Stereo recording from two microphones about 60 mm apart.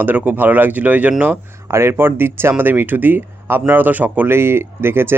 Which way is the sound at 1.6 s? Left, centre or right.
Right.